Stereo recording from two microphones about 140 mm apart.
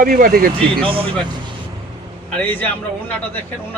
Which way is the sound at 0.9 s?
40° right (ahead or behind).